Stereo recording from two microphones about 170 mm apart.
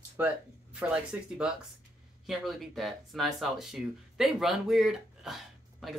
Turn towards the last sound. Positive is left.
turn(degrees=0)  # may be behind; listen again after turning